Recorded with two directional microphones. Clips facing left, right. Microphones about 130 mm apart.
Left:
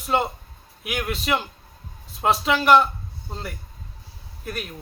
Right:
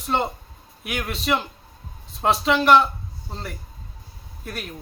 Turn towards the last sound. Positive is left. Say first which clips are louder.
# left 2 dB
turn(degrees=0)  # may be behind; listen again after turning